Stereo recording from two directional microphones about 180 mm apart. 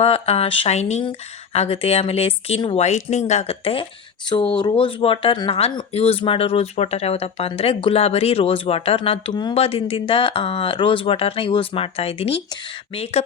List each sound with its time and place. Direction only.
0.0 s speech: 35° left (ahead or behind)